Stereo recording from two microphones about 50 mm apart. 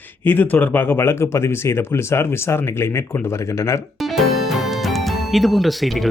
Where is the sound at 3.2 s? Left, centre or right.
Left.